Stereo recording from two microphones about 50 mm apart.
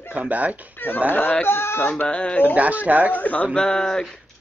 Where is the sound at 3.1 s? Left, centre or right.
Left.